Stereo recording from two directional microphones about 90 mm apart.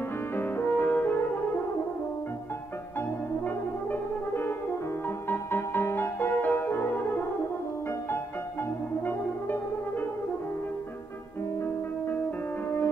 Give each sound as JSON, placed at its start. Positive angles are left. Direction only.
{"t": 0.4, "sound": "music", "side_deg": 20}
{"t": 3.4, "sound": "brass instrument", "side_deg": 20}
{"t": 5.3, "sound": "music", "side_deg": 25}
{"t": 9.0, "sound": "brass instrument", "side_deg": 20}
{"t": 12.6, "sound": "music", "side_deg": 25}